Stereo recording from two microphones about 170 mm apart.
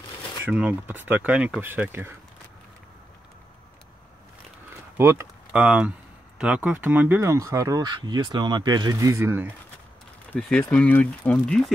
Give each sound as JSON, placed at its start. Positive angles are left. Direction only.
{"t": 0.4, "sound": "speech", "side_deg": -10}
{"t": 4.9, "sound": "speech", "side_deg": -15}
{"t": 10.7, "sound": "speech", "side_deg": 10}